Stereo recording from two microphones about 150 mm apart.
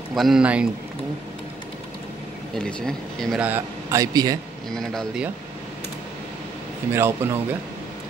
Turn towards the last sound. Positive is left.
turn(degrees=-15)  # may be behind; listen again after turning